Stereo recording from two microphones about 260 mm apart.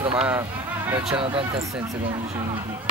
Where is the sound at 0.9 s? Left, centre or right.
Centre.